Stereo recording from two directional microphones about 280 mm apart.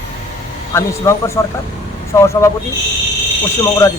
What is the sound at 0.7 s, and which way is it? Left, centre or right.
Speech, centre.